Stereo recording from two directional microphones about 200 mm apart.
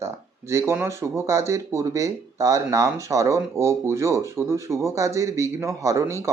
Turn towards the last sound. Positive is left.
turn(degrees=-15)  # may be behind; listen again after turning